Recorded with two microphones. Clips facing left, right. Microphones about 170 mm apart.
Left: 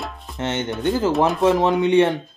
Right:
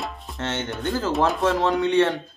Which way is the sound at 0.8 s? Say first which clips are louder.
Left 4 dB; 20° left (ahead or behind).